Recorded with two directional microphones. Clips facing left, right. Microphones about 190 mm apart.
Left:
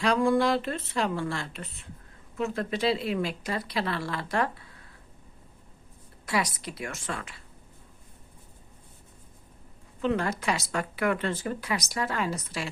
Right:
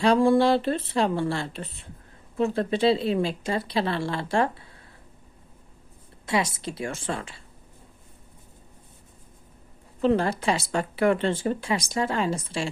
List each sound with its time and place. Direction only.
0.0 s speech: 30° right (ahead or behind)
6.2 s speech: 25° right (ahead or behind)
10.0 s speech: 30° right (ahead or behind)